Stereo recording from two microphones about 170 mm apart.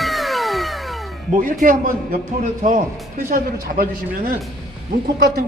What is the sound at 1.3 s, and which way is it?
Speech, 55° right (ahead or behind).